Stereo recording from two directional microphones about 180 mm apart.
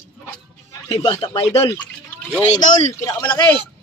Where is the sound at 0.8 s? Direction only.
25° left (ahead or behind).